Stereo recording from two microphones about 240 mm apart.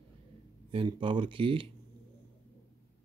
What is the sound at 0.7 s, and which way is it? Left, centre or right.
Speech, right.